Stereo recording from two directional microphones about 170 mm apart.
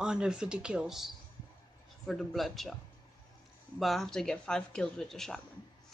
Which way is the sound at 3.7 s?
Centre (ahead or behind).